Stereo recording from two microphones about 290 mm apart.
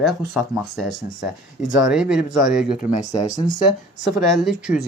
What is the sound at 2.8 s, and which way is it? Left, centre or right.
Speech, left.